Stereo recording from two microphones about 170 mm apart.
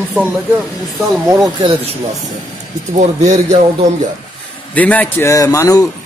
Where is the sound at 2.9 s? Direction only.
45° right (ahead or behind).